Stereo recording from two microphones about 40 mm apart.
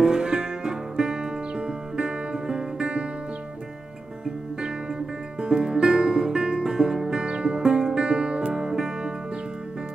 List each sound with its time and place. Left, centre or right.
0.0 s music: centre
5.4 s music: centre